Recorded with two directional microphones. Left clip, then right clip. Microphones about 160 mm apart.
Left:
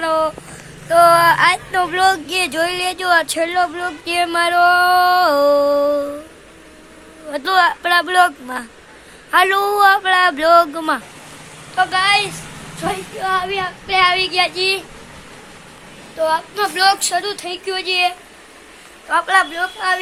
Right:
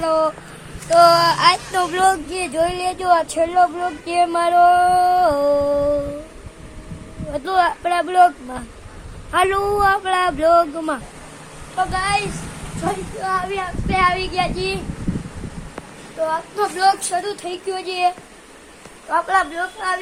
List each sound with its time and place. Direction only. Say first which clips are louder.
0.9 s a sound: left 2 dB; centre (ahead or behind)
2.3 s music: left 2 dB; 10° left (ahead or behind)
7.3 s music: left 3 dB; 10° left (ahead or behind)
9.3 s music: left 3 dB; 15° left (ahead or behind)
11.8 s a woman's voice: left 5 dB; 15° left (ahead or behind)
13.5 s child singing: left 3 dB; 50° left (ahead or behind)
14.0 s music: left 4 dB; 15° left (ahead or behind)
16.6 s music: even; 10° left (ahead or behind)
17.2 s a woman's voice: left 3 dB; 25° left (ahead or behind)
17.5 s speech: left 5 dB; 5° left (ahead or behind)
19.1 s speech: left 3 dB; centre (ahead or behind)
19.5 s a woman's voice: left 4 dB; 20° left (ahead or behind)